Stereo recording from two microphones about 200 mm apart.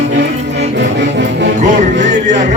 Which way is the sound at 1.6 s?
40° right (ahead or behind).